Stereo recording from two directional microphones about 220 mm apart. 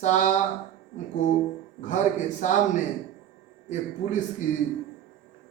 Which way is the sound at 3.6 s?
35° left (ahead or behind).